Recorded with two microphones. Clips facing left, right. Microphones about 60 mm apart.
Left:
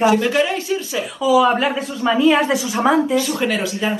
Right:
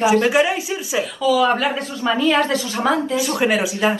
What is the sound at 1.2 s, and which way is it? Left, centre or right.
Speech, centre.